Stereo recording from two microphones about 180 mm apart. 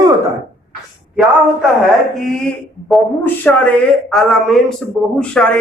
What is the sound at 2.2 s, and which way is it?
Speech, centre (ahead or behind).